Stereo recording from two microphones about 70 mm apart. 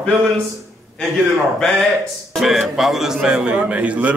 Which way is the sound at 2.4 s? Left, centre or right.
Centre.